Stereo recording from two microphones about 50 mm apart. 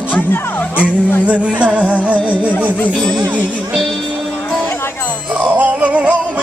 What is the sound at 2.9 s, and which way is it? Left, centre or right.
Speech, centre.